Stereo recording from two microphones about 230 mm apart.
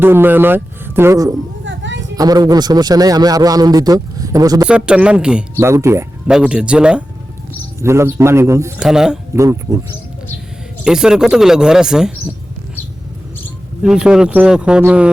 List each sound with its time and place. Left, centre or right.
0.0 s a man's voice: centre
1.6 s a sound: right
2.1 s a man's voice: centre
4.6 s a man's voice: centre
9.4 s a man's voice: centre
10.8 s speech: centre
13.8 s speech: centre